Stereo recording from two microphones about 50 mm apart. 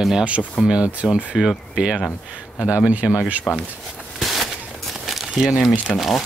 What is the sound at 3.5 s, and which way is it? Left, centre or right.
Speech, centre.